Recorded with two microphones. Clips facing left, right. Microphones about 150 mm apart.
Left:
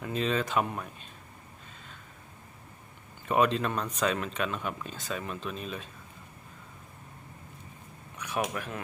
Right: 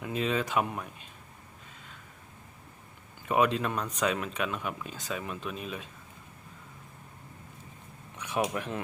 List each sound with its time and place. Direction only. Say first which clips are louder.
0.0 s speech: even; 10° right (ahead or behind)
3.2 s speech: even; 10° right (ahead or behind)
8.5 s speech: right 3 dB; 25° right (ahead or behind)